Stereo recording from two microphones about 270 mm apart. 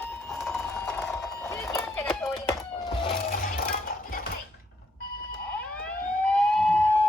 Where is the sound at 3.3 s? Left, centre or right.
Left.